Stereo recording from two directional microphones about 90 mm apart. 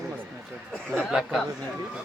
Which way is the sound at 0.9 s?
5° right (ahead or behind).